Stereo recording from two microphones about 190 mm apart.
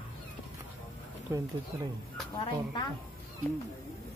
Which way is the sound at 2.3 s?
20° left (ahead or behind).